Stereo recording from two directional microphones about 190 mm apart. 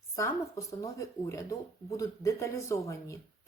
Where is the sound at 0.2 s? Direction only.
15° left (ahead or behind).